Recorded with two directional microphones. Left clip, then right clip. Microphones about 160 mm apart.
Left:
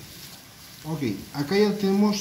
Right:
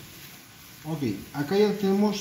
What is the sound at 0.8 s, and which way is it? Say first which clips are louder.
Speech: left 1 dB; 10° right (ahead or behind).